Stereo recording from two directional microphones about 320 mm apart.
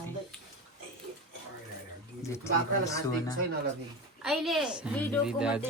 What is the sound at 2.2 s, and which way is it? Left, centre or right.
Speech, centre.